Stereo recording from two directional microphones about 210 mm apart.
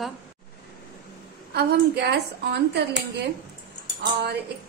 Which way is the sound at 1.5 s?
50° right (ahead or behind).